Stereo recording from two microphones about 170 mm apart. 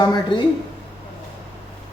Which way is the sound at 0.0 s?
25° left (ahead or behind).